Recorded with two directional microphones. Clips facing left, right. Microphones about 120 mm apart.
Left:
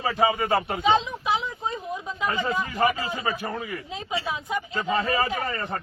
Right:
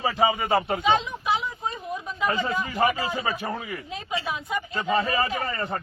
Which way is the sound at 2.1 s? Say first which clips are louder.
Right 1 dB; 20° left (ahead or behind).